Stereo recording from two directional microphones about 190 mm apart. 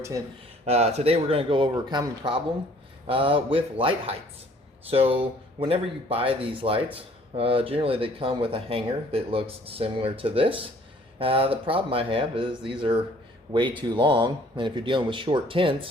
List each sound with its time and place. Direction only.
0.6 s speech: 35° right (ahead or behind)